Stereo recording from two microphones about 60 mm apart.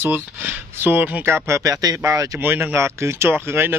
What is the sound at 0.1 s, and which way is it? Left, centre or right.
Speech, right.